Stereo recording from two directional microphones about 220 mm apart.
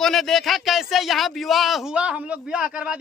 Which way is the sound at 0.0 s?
Centre (ahead or behind).